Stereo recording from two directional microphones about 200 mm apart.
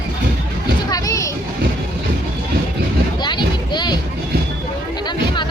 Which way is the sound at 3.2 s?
20° left (ahead or behind).